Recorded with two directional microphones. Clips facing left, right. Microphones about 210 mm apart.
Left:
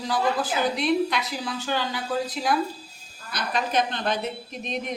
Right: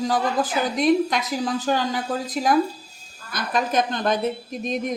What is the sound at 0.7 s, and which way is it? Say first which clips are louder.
A woman's voice: right 8 dB; 45° right (ahead or behind).